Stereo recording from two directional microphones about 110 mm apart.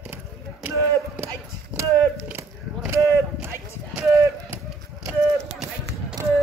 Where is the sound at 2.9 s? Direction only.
25° right (ahead or behind).